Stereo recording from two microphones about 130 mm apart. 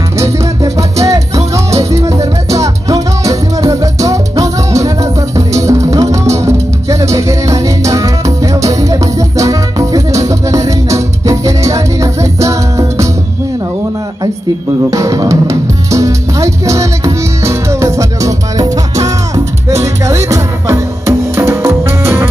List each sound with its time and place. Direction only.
0.7 s music: 25° right (ahead or behind)
14.9 s music: 25° right (ahead or behind)